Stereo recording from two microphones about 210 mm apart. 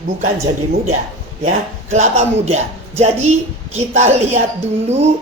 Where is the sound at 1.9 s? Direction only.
30° right (ahead or behind).